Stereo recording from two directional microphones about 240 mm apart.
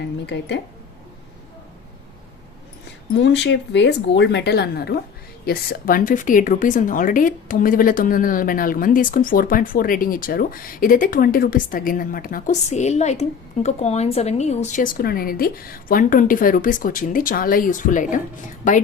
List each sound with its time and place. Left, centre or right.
0.3 s speech: left
3.2 s a woman's voice: left